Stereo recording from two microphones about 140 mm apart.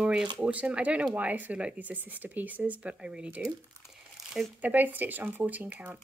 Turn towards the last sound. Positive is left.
turn(degrees=-10)  # may be behind; listen again after turning